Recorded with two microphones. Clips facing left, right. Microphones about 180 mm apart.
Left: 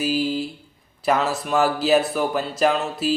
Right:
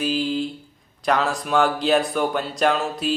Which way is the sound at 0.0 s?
5° left (ahead or behind).